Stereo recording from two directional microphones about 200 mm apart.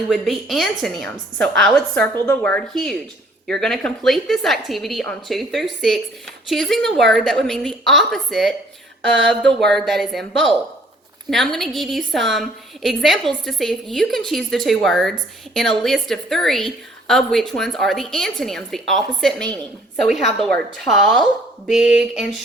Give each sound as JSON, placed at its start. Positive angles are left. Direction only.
{"t": 0.1, "sound": "a woman's voice", "side_deg": 0}
{"t": 9.0, "sound": "speech", "side_deg": -65}
{"t": 9.3, "sound": "a woman's voice", "side_deg": 5}